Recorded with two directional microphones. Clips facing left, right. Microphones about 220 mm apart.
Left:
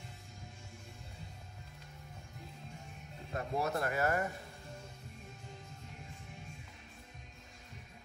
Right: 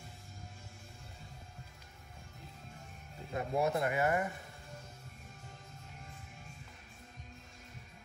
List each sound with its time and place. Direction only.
3.3 s speech: 20° right (ahead or behind)